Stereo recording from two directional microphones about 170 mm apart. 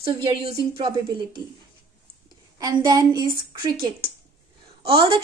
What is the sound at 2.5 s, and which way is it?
A woman's voice, 20° right (ahead or behind).